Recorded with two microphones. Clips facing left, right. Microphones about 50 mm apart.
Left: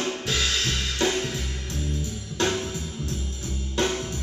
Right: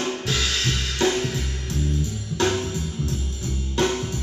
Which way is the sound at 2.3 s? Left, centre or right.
Centre.